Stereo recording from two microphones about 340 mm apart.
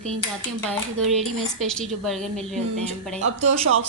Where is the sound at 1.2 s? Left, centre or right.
Centre.